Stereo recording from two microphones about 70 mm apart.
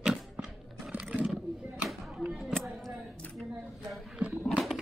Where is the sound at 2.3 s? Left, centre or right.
Centre.